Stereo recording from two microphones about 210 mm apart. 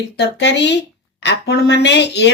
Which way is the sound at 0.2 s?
55° left (ahead or behind).